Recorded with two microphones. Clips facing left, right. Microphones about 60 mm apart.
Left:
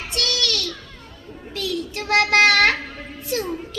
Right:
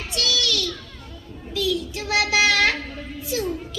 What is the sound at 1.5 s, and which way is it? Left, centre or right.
Child singing, left.